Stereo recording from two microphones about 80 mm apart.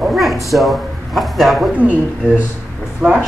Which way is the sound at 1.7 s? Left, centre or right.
Centre.